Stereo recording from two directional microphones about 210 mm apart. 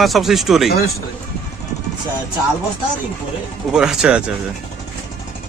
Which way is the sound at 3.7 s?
5° right (ahead or behind).